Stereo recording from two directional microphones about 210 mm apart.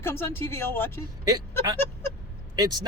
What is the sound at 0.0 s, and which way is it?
Speech, 10° left (ahead or behind).